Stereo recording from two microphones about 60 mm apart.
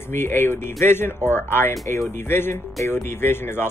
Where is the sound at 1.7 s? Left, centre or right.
Left.